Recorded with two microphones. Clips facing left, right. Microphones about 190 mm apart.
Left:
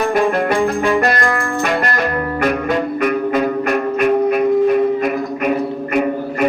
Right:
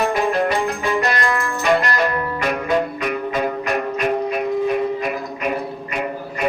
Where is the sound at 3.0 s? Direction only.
55° left (ahead or behind).